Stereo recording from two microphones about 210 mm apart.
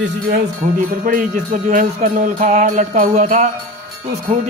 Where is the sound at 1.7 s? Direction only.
40° right (ahead or behind).